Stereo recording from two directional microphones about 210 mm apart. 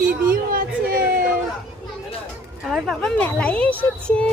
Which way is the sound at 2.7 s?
Centre (ahead or behind).